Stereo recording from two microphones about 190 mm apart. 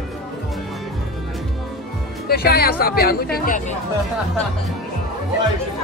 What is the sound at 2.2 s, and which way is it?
Speech, 55° left (ahead or behind).